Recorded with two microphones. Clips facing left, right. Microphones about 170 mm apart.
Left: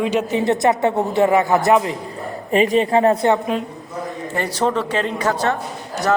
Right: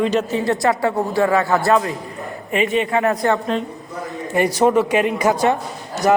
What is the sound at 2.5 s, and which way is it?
Speech, 35° left (ahead or behind).